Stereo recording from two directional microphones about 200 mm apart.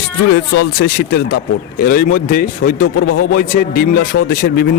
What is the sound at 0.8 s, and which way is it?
Speech, 50° left (ahead or behind).